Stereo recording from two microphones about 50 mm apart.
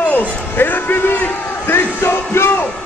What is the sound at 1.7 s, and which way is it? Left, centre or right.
Music, left.